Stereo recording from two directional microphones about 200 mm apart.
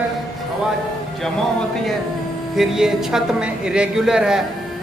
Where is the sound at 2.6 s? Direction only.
Centre (ahead or behind).